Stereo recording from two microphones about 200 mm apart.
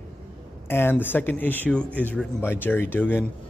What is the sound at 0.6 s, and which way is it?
A man's voice, 10° left (ahead or behind).